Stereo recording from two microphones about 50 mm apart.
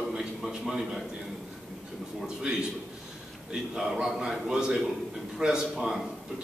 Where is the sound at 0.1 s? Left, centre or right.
Centre.